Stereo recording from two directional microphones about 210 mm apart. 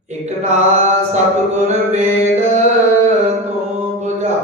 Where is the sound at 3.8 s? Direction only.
30° right (ahead or behind).